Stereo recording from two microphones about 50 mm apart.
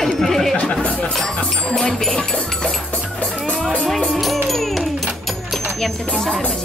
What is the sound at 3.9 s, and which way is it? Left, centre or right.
Music, centre.